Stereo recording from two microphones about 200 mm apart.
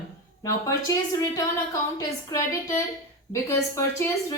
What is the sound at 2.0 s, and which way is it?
A woman's voice, 15° left (ahead or behind).